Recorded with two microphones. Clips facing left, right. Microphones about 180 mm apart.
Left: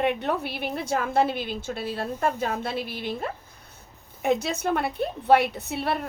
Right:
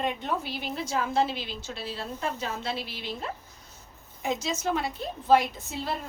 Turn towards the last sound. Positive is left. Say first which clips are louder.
# left 5 dB
turn(degrees=65)  # may be behind; listen again after turning